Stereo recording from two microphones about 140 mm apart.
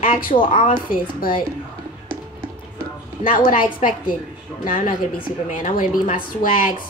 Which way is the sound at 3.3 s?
80° left.